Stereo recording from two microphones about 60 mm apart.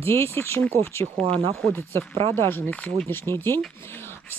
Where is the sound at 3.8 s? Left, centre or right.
Left.